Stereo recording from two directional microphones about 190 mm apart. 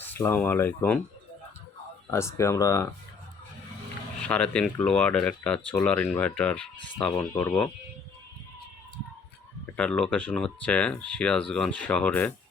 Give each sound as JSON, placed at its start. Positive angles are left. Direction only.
{"t": 0.1, "sound": "speech", "side_deg": 10}
{"t": 2.0, "sound": "speech", "side_deg": 15}
{"t": 4.2, "sound": "speech", "side_deg": 5}
{"t": 9.7, "sound": "speech", "side_deg": 5}